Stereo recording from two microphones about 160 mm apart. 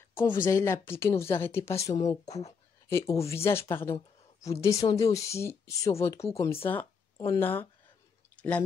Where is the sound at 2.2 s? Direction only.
45° left (ahead or behind).